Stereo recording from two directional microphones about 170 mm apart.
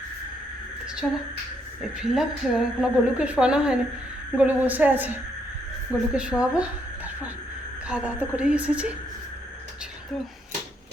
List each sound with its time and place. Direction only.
1.0 s a woman's voice: 5° left (ahead or behind)